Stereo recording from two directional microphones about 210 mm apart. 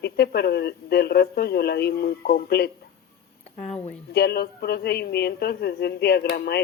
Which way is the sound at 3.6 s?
30° left (ahead or behind).